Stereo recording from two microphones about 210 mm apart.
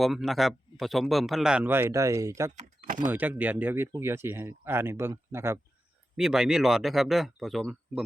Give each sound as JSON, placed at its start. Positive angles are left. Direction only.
{"t": 0.0, "sound": "speech", "side_deg": 0}
{"t": 2.6, "sound": "speech", "side_deg": -35}
{"t": 3.1, "sound": "speech", "side_deg": -10}